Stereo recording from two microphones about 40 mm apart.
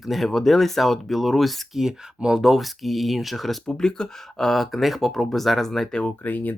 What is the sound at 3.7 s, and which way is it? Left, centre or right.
Speech, centre.